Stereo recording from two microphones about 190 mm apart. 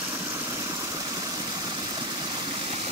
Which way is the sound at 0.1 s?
15° right (ahead or behind).